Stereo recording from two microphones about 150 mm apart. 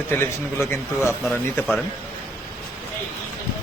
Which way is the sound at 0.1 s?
15° left (ahead or behind).